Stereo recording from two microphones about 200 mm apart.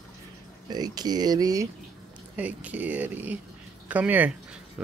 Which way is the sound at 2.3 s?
5° right (ahead or behind).